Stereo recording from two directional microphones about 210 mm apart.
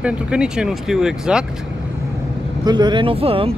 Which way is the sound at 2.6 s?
20° right (ahead or behind).